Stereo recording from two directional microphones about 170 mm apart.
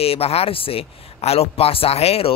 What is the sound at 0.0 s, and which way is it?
Speech, 35° left (ahead or behind).